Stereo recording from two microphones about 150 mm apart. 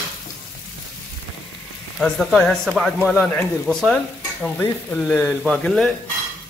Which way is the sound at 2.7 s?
5° right (ahead or behind).